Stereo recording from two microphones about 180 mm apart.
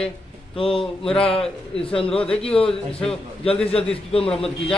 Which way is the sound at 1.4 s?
5° left (ahead or behind).